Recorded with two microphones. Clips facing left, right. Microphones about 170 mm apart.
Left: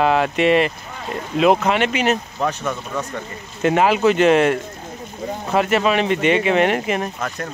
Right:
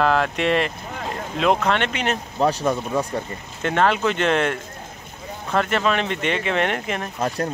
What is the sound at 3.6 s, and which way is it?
Speech, 5° left (ahead or behind).